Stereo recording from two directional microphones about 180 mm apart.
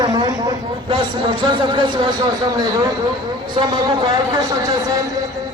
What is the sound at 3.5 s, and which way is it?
Speech, 25° right (ahead or behind).